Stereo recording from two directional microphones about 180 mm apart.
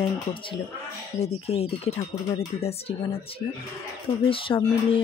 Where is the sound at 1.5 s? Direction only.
35° left (ahead or behind).